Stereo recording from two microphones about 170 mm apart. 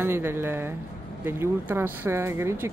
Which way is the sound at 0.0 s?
15° right (ahead or behind).